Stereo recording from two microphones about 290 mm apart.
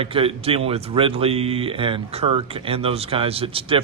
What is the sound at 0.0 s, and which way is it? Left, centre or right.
Speech, centre.